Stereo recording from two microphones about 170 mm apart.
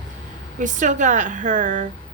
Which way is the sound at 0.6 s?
50° right (ahead or behind).